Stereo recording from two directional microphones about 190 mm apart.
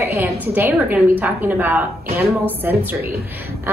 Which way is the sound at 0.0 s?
10° right (ahead or behind).